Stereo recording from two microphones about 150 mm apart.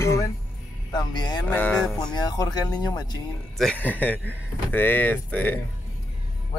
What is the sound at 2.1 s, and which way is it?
Speech, 25° left (ahead or behind).